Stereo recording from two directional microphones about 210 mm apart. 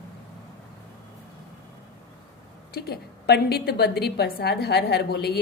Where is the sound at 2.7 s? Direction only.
50° left (ahead or behind).